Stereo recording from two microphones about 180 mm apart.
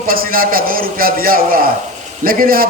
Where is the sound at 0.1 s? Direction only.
55° right (ahead or behind).